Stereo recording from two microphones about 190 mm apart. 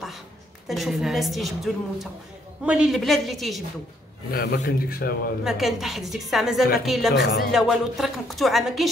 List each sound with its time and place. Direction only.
0.7 s a woman's voice: centre (ahead or behind)
4.3 s speech: 55° left (ahead or behind)
5.4 s a woman's voice: centre (ahead or behind)